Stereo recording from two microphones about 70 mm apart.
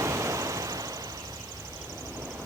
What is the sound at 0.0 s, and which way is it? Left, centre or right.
Vehicle, right.